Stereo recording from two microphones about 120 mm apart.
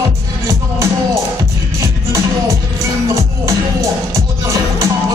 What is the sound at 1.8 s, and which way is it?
Music, 25° right (ahead or behind).